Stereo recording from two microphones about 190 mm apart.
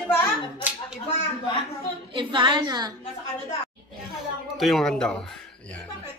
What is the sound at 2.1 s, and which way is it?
Speech, 25° right (ahead or behind).